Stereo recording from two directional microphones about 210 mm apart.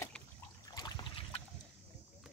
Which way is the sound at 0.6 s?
20° left (ahead or behind).